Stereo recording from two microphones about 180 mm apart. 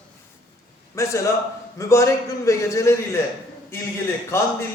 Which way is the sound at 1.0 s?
15° left (ahead or behind).